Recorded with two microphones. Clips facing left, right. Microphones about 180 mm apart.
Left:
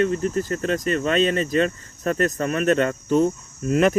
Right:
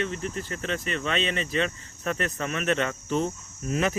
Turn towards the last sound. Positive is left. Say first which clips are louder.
# left 8 dB
turn(degrees=55)  # may be behind; listen again after turning